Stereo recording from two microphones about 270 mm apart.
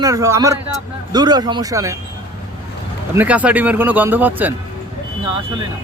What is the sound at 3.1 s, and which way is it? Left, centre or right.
A man's voice, centre.